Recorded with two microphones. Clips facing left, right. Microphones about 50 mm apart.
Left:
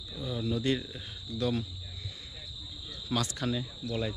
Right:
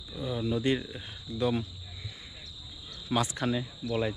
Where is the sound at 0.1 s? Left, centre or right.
Centre.